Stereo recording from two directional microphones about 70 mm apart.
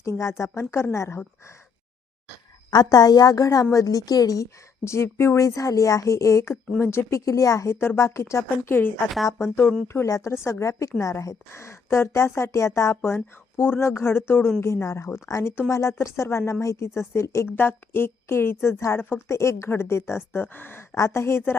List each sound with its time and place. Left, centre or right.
0.2 s a woman's voice: left
2.6 s a woman's voice: left
3.4 s a woman's voice: left
14.6 s a woman's voice: left
20.9 s a woman's voice: left